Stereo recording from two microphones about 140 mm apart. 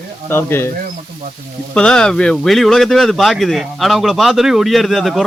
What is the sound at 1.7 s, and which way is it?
Speech, 5° left (ahead or behind).